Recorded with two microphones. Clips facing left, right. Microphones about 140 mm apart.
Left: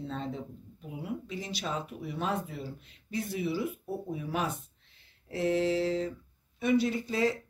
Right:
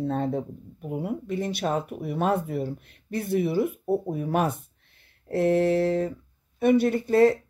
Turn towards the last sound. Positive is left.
turn(degrees=-55)  # may be behind; listen again after turning